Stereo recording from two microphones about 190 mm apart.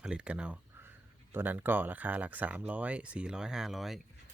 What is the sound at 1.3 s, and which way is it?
Speech, 10° right (ahead or behind).